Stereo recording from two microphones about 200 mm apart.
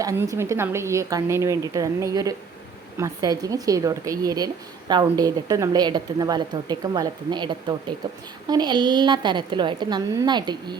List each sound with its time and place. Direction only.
0.0 s a woman's voice: 15° right (ahead or behind)